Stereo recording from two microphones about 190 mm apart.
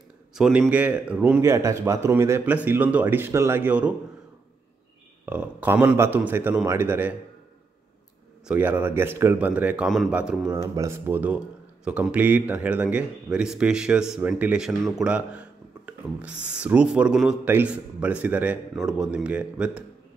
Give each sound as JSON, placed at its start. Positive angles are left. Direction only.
{"t": 0.3, "sound": "a man's voice", "side_deg": -5}
{"t": 5.2, "sound": "a man's voice", "side_deg": -10}
{"t": 8.5, "sound": "a man's voice", "side_deg": -10}
{"t": 10.6, "sound": "speech", "side_deg": -15}